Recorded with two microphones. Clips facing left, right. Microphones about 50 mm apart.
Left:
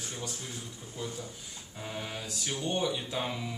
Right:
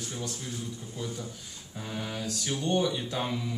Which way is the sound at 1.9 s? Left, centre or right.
Centre.